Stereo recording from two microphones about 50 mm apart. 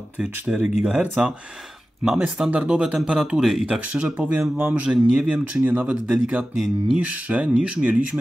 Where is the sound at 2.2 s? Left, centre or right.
Centre.